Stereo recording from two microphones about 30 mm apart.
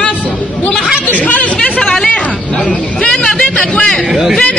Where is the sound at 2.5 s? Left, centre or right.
Left.